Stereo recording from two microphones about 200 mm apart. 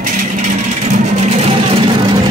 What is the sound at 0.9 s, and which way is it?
Vehicle, 35° right (ahead or behind).